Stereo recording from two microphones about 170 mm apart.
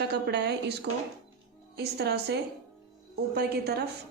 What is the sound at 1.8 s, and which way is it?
A woman's voice, 75° right (ahead or behind).